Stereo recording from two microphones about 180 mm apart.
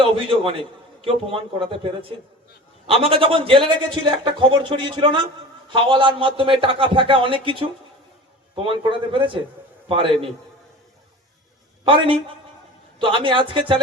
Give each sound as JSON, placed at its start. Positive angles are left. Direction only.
{"t": 0.0, "sound": "a man's voice", "side_deg": -30}
{"t": 11.9, "sound": "a man's voice", "side_deg": -30}